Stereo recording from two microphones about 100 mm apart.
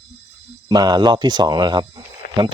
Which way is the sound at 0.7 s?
45° right (ahead or behind).